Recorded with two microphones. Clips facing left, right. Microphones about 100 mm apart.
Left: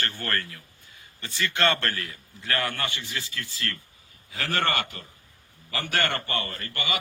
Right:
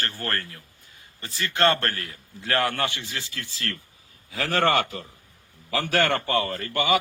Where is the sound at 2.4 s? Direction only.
65° right (ahead or behind); by 6.6 s 90° right.